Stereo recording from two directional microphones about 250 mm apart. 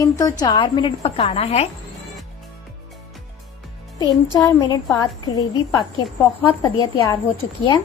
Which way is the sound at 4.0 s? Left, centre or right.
Centre.